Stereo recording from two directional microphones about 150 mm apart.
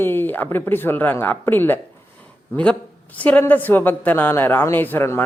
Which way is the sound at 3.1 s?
10° left (ahead or behind).